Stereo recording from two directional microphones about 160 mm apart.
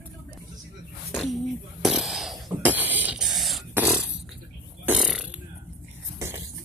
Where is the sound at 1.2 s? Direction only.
Centre (ahead or behind).